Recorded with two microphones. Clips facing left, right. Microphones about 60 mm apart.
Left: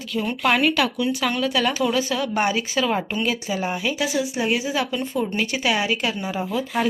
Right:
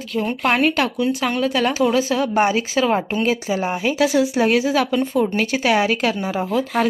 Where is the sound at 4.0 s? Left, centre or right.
Right.